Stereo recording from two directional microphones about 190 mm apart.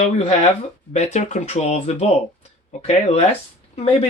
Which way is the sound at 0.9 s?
35° left (ahead or behind).